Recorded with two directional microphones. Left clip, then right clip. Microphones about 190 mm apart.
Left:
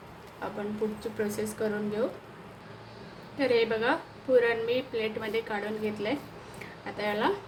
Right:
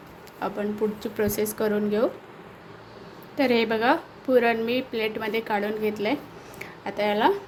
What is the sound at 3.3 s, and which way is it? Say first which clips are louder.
A woman's voice: right 3 dB; 50° right (ahead or behind).